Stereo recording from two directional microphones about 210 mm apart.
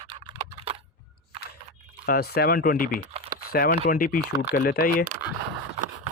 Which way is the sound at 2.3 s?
45° left (ahead or behind).